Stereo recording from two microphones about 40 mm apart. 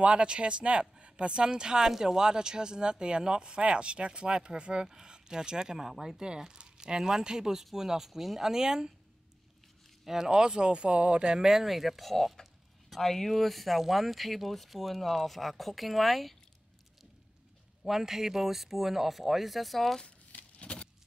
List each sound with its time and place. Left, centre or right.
0.0 s speech: right
10.0 s speech: centre
11.4 s speech: centre
17.8 s speech: centre
20.6 s a sound: left